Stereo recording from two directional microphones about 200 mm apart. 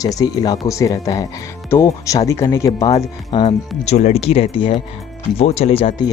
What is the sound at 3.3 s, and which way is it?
Speech, 25° left (ahead or behind).